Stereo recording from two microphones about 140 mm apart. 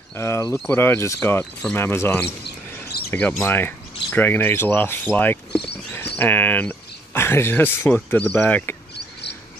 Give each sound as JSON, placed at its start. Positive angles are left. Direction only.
{"t": 0.1, "sound": "speech", "side_deg": 20}
{"t": 1.4, "sound": "speech", "side_deg": 5}
{"t": 1.8, "sound": "speech", "side_deg": 15}